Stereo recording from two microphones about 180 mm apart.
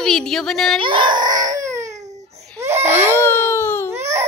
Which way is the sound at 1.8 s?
40° right (ahead or behind).